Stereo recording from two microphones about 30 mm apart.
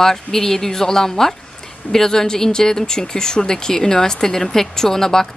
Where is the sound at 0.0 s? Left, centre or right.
Centre.